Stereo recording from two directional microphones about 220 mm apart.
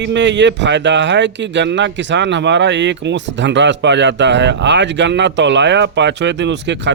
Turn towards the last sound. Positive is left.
turn(degrees=-55)  # may be behind; listen again after turning